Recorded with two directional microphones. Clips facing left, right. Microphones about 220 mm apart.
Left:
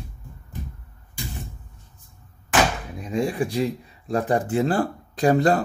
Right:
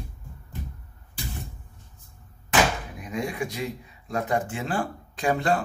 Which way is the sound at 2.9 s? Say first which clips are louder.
Left 6 dB; 30° left (ahead or behind).